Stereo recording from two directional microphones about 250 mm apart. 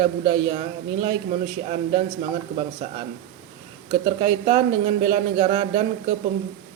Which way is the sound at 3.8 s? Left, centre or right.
Right.